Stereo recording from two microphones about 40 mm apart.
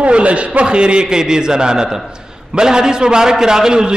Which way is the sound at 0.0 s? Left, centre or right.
Right.